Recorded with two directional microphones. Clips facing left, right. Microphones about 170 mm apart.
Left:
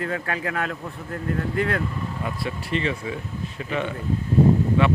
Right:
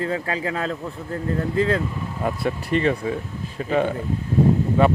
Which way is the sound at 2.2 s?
45° right (ahead or behind).